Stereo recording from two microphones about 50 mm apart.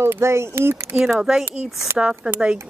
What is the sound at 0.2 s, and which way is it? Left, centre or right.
Speech, right.